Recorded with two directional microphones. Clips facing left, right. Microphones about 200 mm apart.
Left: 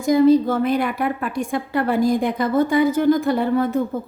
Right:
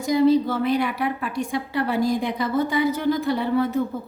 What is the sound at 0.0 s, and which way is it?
A woman's voice, 50° left (ahead or behind).